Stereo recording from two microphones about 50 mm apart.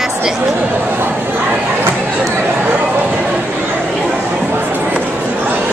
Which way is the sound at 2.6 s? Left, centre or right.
Right.